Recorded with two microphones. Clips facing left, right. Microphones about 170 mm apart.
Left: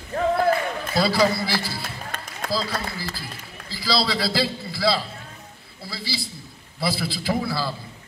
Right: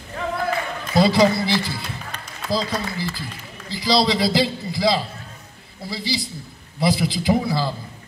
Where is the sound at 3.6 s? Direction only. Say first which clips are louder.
Right 5 dB; 20° right (ahead or behind).